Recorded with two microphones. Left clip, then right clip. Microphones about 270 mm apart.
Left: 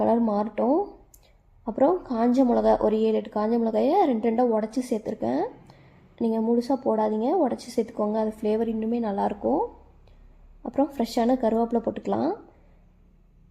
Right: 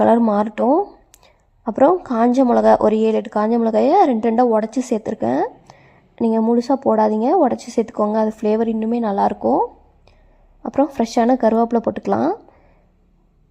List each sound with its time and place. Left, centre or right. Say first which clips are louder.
0.0 s a woman's voice: right 8 dB; right